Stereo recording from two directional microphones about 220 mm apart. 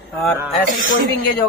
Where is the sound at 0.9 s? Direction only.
40° left (ahead or behind).